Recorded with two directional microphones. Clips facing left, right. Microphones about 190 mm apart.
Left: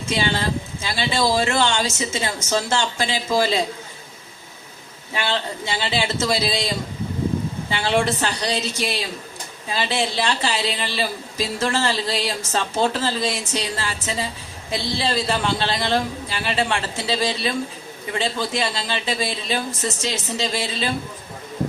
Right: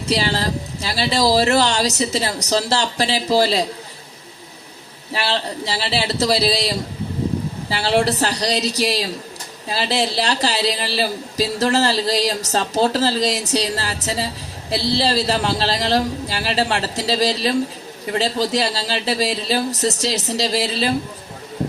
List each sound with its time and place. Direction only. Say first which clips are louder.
0.1 s speech: right 2 dB; 35° right (ahead or behind)
5.1 s speech: right 2 dB; 35° right (ahead or behind)